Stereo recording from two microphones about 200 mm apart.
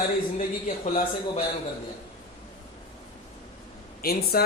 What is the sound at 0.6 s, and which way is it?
Speech, 35° left (ahead or behind).